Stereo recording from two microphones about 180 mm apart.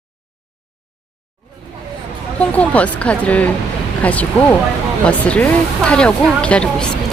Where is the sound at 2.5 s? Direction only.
5° left (ahead or behind).